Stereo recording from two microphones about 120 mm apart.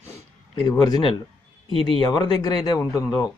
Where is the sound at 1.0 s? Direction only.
45° left (ahead or behind).